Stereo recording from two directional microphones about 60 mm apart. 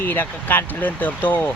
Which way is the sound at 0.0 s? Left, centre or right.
Left.